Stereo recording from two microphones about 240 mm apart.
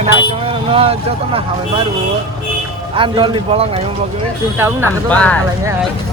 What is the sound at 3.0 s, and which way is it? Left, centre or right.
Speech, right.